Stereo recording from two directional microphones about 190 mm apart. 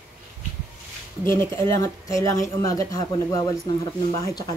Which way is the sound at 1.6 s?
15° left (ahead or behind).